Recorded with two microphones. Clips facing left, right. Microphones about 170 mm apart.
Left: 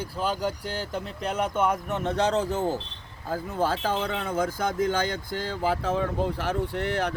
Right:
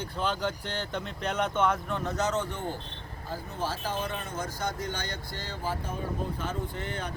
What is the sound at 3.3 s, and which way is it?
Speech, 55° left (ahead or behind).